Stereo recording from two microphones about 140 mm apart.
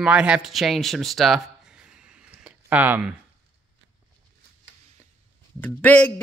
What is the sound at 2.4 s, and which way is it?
Speech, 10° right (ahead or behind).